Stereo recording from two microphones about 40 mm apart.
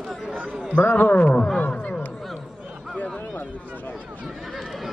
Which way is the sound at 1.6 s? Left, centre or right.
Left.